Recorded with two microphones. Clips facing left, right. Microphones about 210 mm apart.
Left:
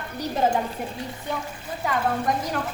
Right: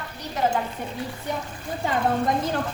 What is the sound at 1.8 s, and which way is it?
Speech, 25° right (ahead or behind).